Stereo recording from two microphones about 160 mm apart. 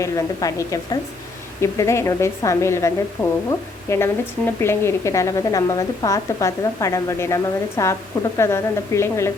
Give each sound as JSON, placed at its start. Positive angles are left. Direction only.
{"t": 0.0, "sound": "a woman's voice", "side_deg": 20}